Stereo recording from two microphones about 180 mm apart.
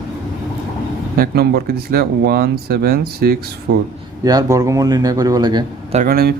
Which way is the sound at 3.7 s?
75° right (ahead or behind).